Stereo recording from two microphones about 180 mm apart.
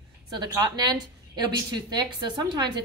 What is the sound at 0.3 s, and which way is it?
Speech, 20° right (ahead or behind).